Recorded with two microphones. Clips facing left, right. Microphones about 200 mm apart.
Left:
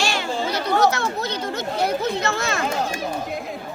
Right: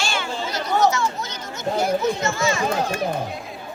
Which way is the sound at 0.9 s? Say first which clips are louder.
Even; 60° left (ahead or behind).